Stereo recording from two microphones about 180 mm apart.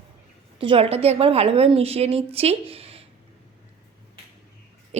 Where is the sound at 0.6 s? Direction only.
30° right (ahead or behind).